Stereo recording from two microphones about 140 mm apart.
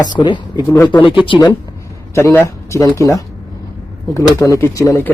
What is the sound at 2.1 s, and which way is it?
Speech, 15° left (ahead or behind).